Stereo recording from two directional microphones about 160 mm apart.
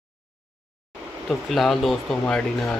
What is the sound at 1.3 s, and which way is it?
Speech, centre (ahead or behind).